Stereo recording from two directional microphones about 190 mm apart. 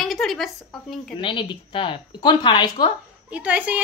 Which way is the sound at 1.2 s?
25° left (ahead or behind).